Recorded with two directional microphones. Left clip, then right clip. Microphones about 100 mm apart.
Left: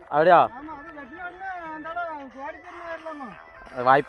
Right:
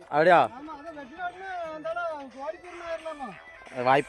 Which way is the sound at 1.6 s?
20° right (ahead or behind).